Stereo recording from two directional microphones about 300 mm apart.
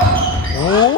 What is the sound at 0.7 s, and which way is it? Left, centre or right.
Speech, centre.